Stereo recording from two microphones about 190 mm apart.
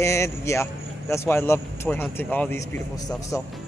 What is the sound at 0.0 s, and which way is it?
A man's voice, 15° left (ahead or behind).